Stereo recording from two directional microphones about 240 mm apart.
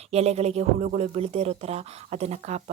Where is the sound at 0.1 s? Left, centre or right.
Right.